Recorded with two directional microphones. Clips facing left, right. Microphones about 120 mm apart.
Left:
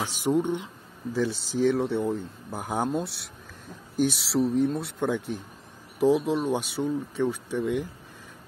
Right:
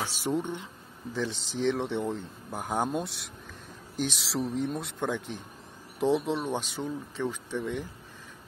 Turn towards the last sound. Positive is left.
turn(degrees=10)  # may be behind; listen again after turning